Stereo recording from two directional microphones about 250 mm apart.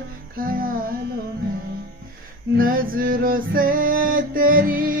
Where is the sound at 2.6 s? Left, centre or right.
Right.